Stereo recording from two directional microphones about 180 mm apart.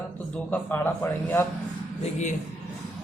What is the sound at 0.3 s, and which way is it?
A man's voice, 10° left (ahead or behind).